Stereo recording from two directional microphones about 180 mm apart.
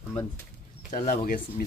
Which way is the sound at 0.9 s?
50° left (ahead or behind).